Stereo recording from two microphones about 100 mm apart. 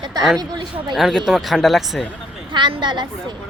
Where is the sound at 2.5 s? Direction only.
50° right (ahead or behind).